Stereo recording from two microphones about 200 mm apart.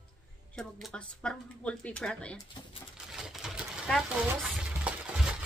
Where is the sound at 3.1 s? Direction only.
Centre (ahead or behind).